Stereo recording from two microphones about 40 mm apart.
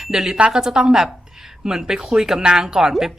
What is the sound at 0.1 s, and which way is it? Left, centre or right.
A woman's voice, centre.